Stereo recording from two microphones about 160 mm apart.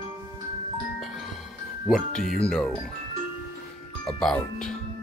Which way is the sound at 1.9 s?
5° left (ahead or behind).